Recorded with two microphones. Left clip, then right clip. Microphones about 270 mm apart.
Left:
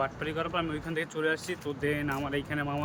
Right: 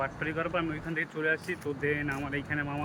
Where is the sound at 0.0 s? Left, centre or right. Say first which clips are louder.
Even; centre.